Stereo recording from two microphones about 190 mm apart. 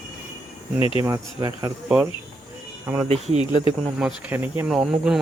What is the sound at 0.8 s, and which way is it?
Speech, 30° left (ahead or behind).